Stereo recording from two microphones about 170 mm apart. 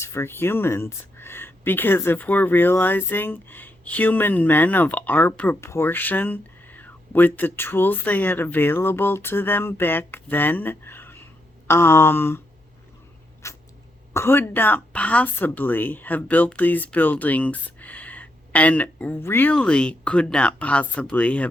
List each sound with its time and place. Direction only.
0.0 s speech: 15° left (ahead or behind)
13.4 s cat: 15° left (ahead or behind)
14.1 s speech: 15° left (ahead or behind)